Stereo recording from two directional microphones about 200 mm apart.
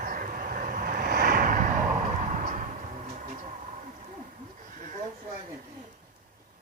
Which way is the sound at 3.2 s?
35° right (ahead or behind).